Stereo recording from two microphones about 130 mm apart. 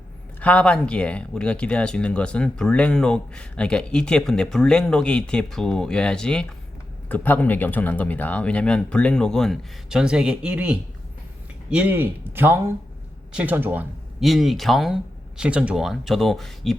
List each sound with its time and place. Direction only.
0.3 s speech: 10° left (ahead or behind); by 13.8 s 15° right (ahead or behind)
14.2 s speech: centre (ahead or behind)